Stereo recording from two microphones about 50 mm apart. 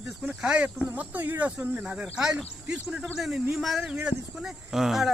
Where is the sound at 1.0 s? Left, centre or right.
Right.